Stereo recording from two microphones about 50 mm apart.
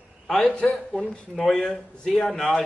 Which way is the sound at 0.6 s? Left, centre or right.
Centre.